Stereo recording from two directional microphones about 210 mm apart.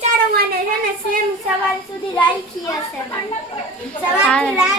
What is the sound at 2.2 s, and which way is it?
Speech, 15° left (ahead or behind).